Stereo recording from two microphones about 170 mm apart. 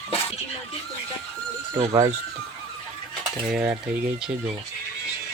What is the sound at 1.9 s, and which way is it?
Stir, 20° right (ahead or behind).